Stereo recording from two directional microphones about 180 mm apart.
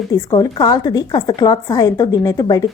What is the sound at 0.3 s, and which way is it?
A woman's voice, 25° left (ahead or behind).